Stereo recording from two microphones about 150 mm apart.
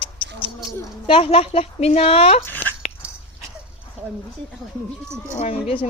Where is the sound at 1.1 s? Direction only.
40° left (ahead or behind).